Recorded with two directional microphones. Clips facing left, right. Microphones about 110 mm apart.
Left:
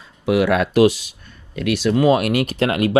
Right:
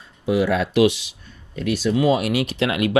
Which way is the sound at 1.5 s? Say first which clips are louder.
Left 2 dB; 85° left.